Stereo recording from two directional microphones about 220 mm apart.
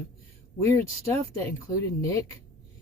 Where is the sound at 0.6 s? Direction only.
15° left (ahead or behind).